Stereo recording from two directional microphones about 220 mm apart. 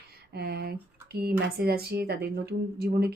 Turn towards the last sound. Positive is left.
turn(degrees=-45)  # may be behind; listen again after turning